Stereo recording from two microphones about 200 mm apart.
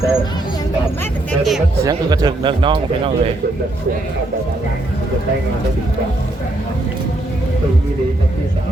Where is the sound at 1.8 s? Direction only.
20° right (ahead or behind).